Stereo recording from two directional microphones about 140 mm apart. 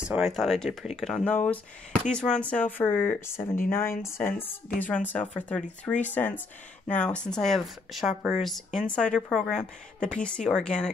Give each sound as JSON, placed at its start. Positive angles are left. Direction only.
{"t": 0.0, "sound": "speech", "side_deg": -5}
{"t": 1.3, "sound": "speech", "side_deg": 10}